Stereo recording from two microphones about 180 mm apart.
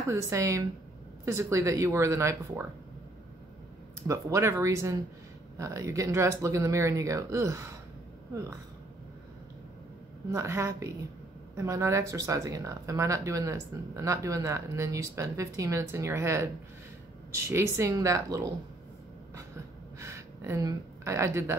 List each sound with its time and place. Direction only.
0.1 s speech: 15° right (ahead or behind)
4.1 s speech: 15° right (ahead or behind)
10.3 s speech: 15° right (ahead or behind)
17.5 s speech: 15° right (ahead or behind)
20.0 s speech: 15° right (ahead or behind)